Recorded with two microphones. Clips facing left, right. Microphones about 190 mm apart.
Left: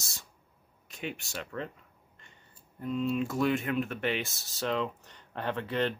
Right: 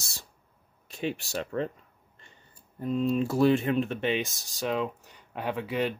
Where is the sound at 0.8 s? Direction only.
30° right (ahead or behind).